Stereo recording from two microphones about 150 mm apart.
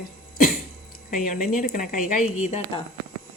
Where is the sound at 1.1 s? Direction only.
65° left (ahead or behind).